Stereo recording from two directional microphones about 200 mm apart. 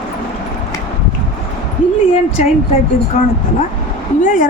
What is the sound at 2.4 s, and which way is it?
Speech, 35° left (ahead or behind).